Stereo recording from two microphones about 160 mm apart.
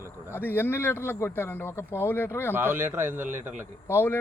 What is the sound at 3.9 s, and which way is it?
Speech, 15° left (ahead or behind).